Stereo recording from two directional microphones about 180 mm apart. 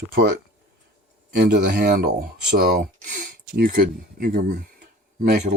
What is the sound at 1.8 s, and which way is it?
Speech, 55° right (ahead or behind).